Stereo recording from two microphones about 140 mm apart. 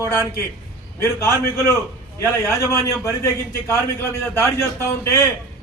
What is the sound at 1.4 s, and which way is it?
A man's voice, 20° left (ahead or behind).